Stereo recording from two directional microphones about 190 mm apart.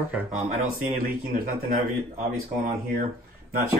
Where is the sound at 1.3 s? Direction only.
40° right (ahead or behind).